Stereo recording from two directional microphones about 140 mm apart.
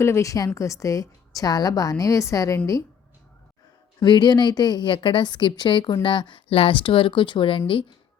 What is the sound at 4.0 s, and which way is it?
A woman's voice, 30° left (ahead or behind).